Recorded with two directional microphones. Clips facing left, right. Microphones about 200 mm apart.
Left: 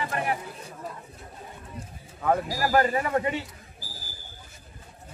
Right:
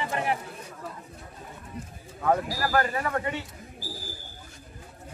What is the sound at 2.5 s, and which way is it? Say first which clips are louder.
Speech: left 3 dB; 15° left (ahead or behind).